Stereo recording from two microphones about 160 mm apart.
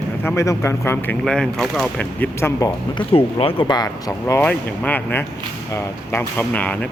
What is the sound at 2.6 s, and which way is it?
Speech, 30° left (ahead or behind).